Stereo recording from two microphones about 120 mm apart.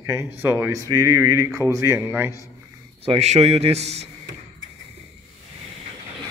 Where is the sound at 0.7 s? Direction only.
30° right (ahead or behind).